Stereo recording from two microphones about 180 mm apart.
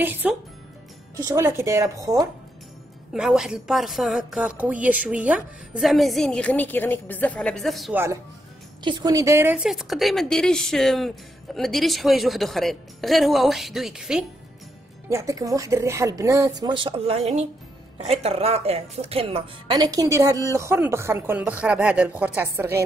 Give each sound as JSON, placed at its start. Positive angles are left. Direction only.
{"t": 0.0, "sound": "speech", "side_deg": -10}
{"t": 3.1, "sound": "a woman's voice", "side_deg": 0}
{"t": 7.9, "sound": "speech", "side_deg": -15}
{"t": 8.8, "sound": "a woman's voice", "side_deg": -25}
{"t": 15.0, "sound": "speech", "side_deg": -15}